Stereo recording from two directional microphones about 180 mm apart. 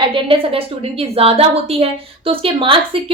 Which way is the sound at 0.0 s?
30° right (ahead or behind).